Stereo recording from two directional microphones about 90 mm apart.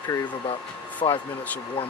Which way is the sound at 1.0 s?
60° left (ahead or behind).